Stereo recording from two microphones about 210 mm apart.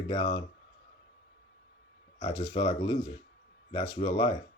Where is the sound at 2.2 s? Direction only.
25° left (ahead or behind).